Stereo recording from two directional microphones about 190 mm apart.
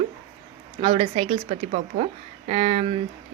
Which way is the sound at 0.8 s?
30° right (ahead or behind).